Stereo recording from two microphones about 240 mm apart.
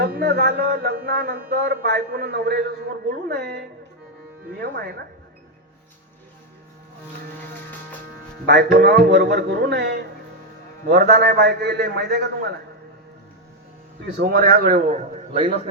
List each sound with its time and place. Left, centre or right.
0.0 s speech: right
8.4 s speech: right
14.2 s speech: right